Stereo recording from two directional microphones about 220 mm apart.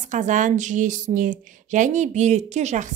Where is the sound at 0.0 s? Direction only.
35° right (ahead or behind).